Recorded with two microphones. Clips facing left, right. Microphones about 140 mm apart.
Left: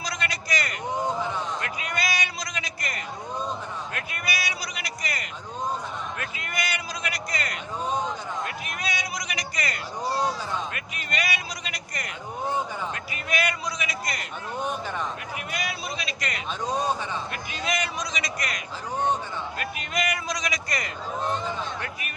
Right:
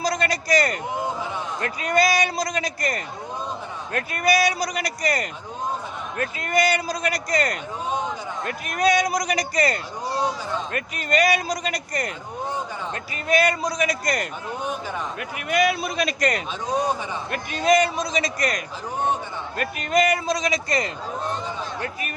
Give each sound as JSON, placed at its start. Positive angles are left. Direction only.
{"t": 0.0, "sound": "a sound", "side_deg": -35}
{"t": 1.6, "sound": "a man's voice", "side_deg": -40}
{"t": 13.2, "sound": "a man's voice", "side_deg": -35}
{"t": 14.6, "sound": "a man's voice", "side_deg": 0}
{"t": 15.4, "sound": "a man's voice", "side_deg": -60}